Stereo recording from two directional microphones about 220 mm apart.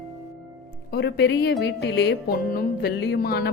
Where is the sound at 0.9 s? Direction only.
50° left (ahead or behind).